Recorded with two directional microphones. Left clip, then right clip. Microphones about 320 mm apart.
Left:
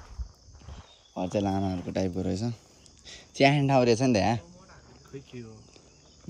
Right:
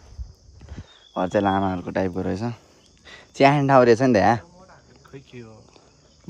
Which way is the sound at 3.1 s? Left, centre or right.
Right.